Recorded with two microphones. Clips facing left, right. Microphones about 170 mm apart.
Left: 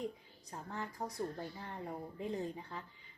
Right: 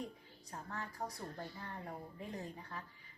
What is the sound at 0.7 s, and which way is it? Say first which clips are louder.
Speech: left 2 dB; 20° left (ahead or behind).